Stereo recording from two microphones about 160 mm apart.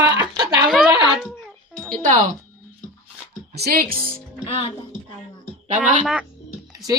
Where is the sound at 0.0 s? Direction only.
25° right (ahead or behind).